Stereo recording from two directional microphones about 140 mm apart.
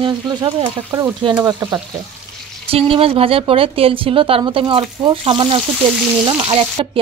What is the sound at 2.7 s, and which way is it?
Speech, 45° right (ahead or behind).